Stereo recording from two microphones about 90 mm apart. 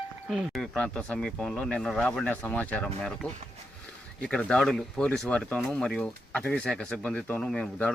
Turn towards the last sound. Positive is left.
turn(degrees=10)  # may be behind; listen again after turning